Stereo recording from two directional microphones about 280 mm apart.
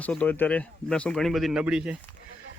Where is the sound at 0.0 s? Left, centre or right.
Centre.